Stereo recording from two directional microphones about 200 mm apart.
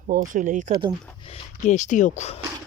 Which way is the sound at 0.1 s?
40° right (ahead or behind).